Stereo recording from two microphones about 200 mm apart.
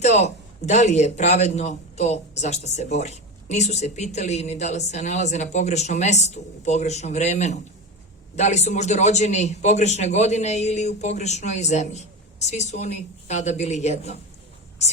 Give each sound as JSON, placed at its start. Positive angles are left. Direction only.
{"t": 0.0, "sound": "a man's voice", "side_deg": 35}